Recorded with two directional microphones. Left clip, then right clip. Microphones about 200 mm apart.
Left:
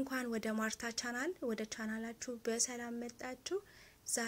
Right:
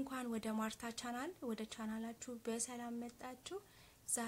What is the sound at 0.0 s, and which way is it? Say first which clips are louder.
A woman's voice: left 5 dB; 5° left (ahead or behind).